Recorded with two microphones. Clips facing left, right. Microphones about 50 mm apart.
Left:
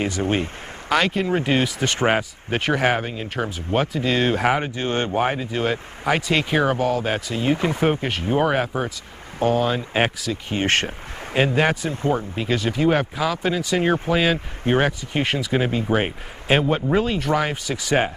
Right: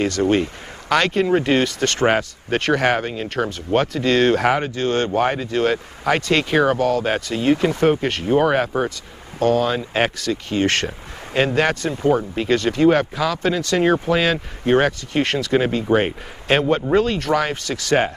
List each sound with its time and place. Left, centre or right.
0.0 s speech: centre
5.3 s speech: centre
10.5 s speech: left
11.3 s speech: centre